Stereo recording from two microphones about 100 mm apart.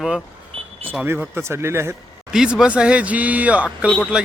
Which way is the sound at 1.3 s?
25° right (ahead or behind).